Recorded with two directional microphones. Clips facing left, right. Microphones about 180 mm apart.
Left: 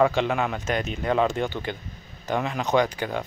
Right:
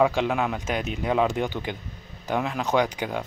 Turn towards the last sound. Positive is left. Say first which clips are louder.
# left 1 dB
turn(degrees=-10)  # may be behind; listen again after turning